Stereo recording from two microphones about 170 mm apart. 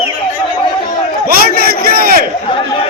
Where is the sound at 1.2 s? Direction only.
65° right (ahead or behind).